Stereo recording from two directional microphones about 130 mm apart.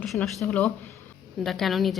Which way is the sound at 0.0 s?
Centre (ahead or behind).